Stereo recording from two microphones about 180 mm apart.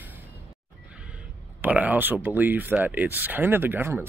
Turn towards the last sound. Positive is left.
turn(degrees=-10)  # may be behind; listen again after turning